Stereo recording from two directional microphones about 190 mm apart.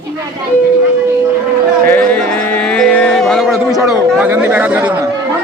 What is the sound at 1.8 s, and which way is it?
Music, 10° left (ahead or behind).